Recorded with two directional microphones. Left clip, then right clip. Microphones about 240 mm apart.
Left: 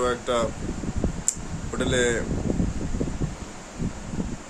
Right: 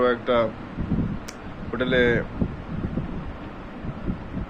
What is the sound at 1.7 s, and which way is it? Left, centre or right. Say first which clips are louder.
Speech: right 3 dB; centre.